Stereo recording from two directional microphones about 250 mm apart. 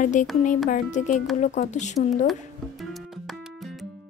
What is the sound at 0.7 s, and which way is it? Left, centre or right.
Speech, left.